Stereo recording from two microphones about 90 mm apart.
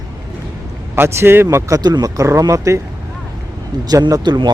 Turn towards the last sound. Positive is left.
turn(degrees=-50)  # may be behind; listen again after turning